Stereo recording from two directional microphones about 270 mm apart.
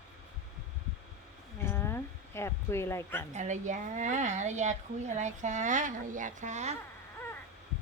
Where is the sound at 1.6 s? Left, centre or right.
Centre.